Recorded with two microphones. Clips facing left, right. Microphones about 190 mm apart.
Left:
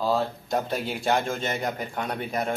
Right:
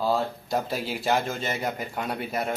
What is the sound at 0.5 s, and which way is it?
A man's voice, centre (ahead or behind).